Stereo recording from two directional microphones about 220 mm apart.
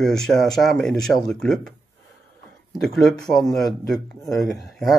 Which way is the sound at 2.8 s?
Centre (ahead or behind).